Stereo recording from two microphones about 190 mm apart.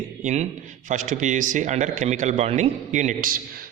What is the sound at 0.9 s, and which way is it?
A man's voice, 40° right (ahead or behind).